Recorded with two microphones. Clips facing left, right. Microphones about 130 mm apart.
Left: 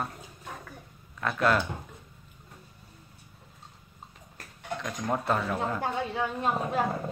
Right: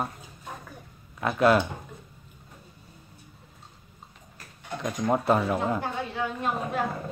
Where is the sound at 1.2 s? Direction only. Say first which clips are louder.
Right 5 dB; 10° right (ahead or behind).